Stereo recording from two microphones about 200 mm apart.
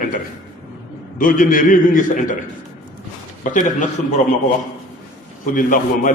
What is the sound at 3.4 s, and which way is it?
Speech, 40° left (ahead or behind).